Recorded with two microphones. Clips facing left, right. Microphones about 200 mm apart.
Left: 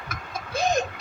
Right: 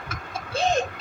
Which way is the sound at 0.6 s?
30° right (ahead or behind).